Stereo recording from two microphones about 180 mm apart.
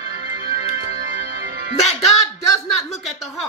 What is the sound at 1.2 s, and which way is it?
Music, 60° right (ahead or behind).